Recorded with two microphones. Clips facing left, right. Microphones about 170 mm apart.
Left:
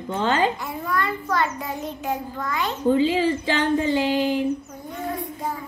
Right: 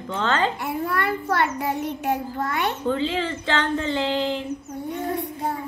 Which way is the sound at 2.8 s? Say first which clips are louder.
Left 9 dB; 10° left (ahead or behind).